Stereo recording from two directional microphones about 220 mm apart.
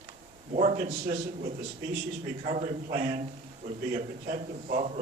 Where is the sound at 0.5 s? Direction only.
35° right (ahead or behind).